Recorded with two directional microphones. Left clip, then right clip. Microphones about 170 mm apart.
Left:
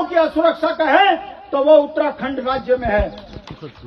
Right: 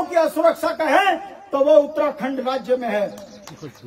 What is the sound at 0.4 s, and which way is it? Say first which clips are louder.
A man's voice: left 2 dB; 25° right (ahead or behind).